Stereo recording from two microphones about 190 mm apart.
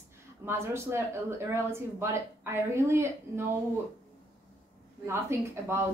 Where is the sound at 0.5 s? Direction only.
15° right (ahead or behind).